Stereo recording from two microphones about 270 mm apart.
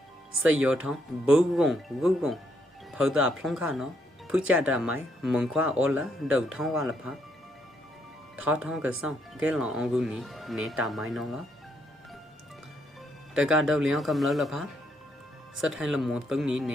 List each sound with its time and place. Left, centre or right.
0.4 s speech: centre
8.4 s speech: centre
13.3 s speech: centre